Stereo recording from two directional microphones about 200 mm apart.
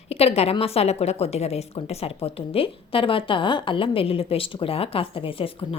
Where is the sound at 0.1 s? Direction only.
30° left (ahead or behind).